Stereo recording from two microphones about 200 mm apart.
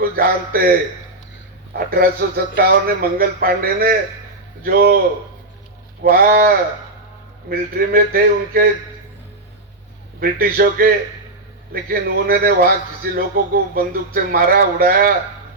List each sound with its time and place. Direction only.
0.0 s a man's voice: 50° right (ahead or behind)
6.0 s a man's voice: 45° right (ahead or behind)
7.5 s a man's voice: 45° right (ahead or behind)
10.2 s a man's voice: 50° right (ahead or behind)